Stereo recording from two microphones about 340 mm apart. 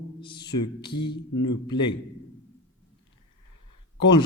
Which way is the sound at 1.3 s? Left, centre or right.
Left.